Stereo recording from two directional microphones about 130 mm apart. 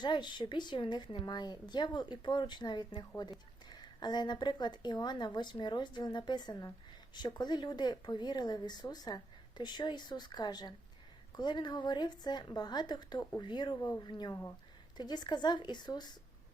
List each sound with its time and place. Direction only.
0.0 s speech: 35° left (ahead or behind)